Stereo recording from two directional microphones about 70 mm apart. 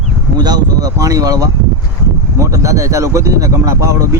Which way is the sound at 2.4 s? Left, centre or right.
Right.